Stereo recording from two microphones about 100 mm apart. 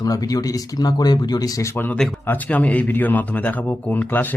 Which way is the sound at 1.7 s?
20° left (ahead or behind).